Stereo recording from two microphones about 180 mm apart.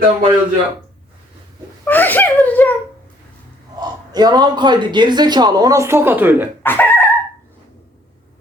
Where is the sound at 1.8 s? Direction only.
10° left (ahead or behind).